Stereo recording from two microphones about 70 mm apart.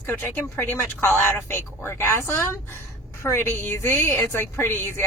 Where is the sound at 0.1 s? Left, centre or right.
Left.